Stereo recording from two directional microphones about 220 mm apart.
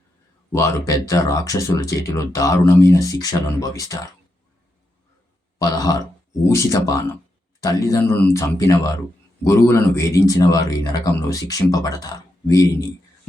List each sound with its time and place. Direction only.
0.5 s speech: 15° left (ahead or behind)
5.5 s a sound: 15° left (ahead or behind)
6.5 s speech: 15° left (ahead or behind)